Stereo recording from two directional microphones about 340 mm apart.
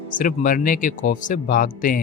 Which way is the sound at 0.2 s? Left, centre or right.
Left.